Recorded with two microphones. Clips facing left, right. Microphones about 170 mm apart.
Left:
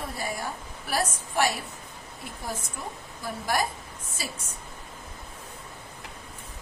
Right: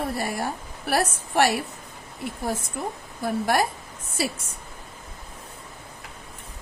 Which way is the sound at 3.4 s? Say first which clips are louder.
Right 4 dB; 60° right (ahead or behind).